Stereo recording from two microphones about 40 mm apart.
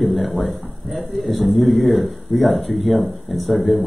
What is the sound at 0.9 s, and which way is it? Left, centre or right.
A man's voice, centre.